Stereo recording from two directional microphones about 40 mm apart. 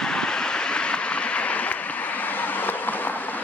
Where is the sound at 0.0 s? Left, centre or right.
Centre.